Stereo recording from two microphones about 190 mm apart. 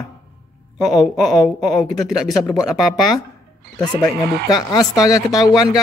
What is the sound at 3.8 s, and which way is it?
Speech, 20° left (ahead or behind).